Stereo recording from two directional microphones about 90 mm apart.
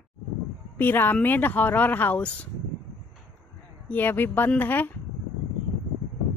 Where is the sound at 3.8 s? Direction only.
20° left (ahead or behind).